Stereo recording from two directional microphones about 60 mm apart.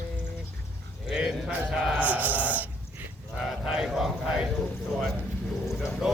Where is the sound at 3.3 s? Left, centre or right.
Centre.